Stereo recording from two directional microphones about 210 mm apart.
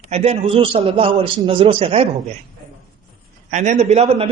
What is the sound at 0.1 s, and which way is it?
A man's voice, 30° right (ahead or behind).